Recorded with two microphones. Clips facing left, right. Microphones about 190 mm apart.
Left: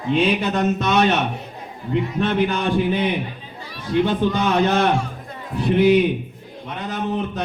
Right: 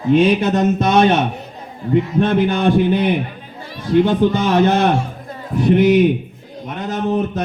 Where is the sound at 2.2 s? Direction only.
40° right (ahead or behind).